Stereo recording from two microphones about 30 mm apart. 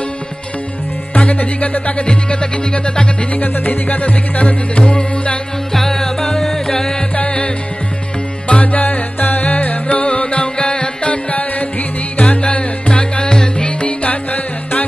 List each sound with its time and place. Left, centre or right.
1.3 s speech: left
3.3 s music: left
5.7 s music: centre
7.2 s music: left
8.5 s music: left
12.2 s music: left
13.2 s music: left
13.7 s music: left
14.0 s music: left